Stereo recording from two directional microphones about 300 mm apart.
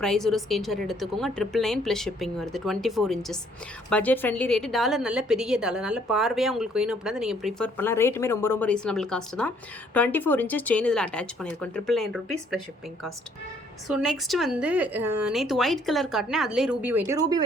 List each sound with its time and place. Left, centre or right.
0.0 s a woman's voice: centre